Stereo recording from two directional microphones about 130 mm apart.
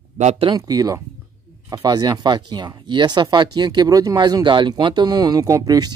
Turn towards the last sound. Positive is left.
turn(degrees=-30)  # may be behind; listen again after turning